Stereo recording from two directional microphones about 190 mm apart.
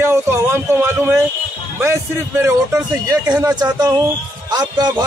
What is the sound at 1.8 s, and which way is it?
A man's voice, 15° right (ahead or behind).